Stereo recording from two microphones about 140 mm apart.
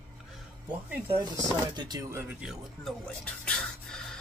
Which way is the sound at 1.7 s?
30° right (ahead or behind).